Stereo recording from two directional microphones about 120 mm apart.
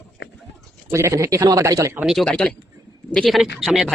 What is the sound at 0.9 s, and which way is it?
Speech, 25° right (ahead or behind).